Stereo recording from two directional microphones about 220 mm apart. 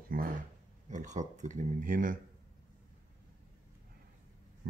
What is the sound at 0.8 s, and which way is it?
Speech, 35° right (ahead or behind).